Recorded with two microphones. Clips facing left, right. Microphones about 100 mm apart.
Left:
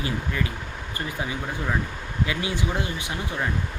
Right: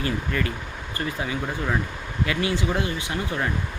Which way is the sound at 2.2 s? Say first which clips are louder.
Right 4 dB; 20° left (ahead or behind).